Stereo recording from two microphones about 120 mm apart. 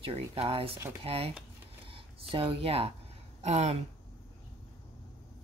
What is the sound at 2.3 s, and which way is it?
Speech, 50° right (ahead or behind).